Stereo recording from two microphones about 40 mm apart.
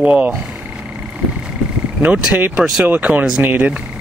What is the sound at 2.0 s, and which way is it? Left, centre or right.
Speech, right.